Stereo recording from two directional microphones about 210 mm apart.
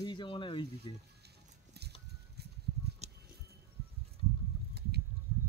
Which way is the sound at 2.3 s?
50° right (ahead or behind).